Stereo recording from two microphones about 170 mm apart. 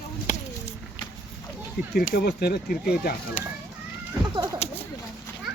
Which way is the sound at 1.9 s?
60° left (ahead or behind).